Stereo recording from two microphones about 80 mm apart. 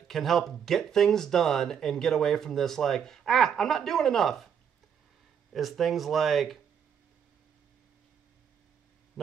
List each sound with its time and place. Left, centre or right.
0.1 s speech: centre
5.5 s speech: centre